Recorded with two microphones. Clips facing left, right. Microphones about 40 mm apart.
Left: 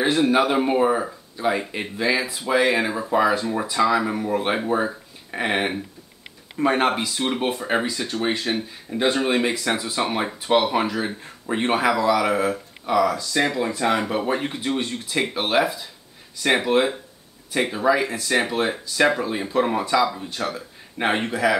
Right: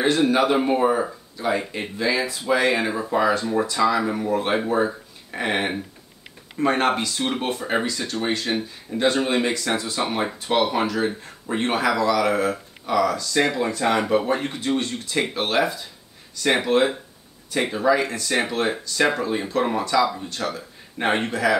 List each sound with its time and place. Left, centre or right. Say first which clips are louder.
0.3 s speech: even; centre